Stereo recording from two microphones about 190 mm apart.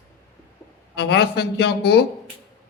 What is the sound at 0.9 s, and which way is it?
A man's voice, 65° left (ahead or behind).